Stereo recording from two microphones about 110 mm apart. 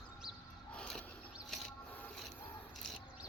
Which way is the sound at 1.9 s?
15° left (ahead or behind).